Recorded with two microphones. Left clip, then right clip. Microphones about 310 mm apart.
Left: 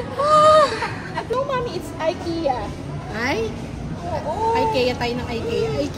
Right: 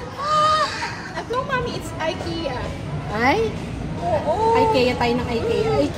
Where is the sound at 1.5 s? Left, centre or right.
Left.